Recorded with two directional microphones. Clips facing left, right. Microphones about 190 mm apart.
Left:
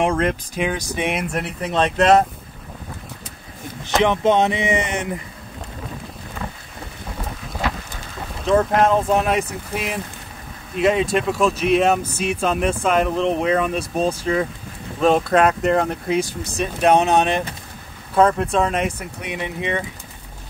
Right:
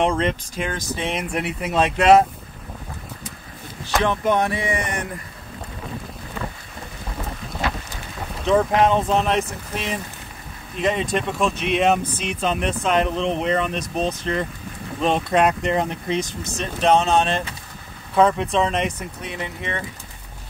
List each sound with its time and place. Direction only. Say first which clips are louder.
0.0 s speech: left 1 dB; 5° left (ahead or behind)
1.3 s speech: even; 5° right (ahead or behind)
3.8 s speech: left 4 dB; 20° left (ahead or behind)
8.4 s speech: left 1 dB; centre (ahead or behind)
18.1 s speech: left 1 dB; centre (ahead or behind)
18.9 s speech: left 2 dB; 15° left (ahead or behind)